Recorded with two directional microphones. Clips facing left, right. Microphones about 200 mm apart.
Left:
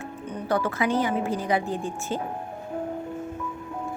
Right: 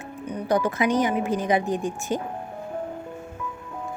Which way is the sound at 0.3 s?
15° right (ahead or behind).